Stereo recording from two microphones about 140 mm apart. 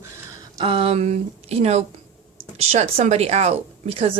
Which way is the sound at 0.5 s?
40° right (ahead or behind).